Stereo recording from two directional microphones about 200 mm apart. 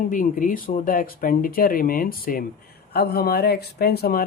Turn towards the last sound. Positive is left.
turn(degrees=50)  # may be behind; listen again after turning